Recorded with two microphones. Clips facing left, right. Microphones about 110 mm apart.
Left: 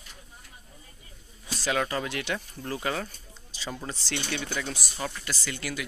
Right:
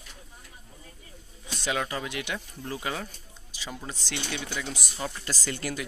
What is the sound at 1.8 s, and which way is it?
Speech, 10° right (ahead or behind).